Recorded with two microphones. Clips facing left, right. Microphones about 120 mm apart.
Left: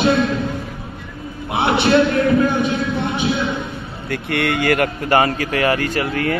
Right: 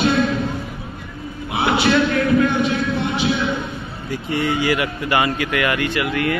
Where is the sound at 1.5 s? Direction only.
25° left (ahead or behind).